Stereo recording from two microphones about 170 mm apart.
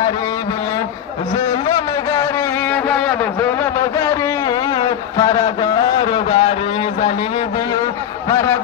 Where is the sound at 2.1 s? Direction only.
15° left (ahead or behind).